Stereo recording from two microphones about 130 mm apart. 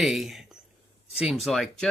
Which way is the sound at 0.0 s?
Centre (ahead or behind).